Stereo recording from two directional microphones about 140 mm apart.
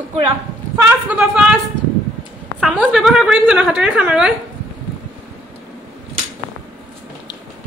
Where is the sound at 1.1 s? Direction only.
5° right (ahead or behind).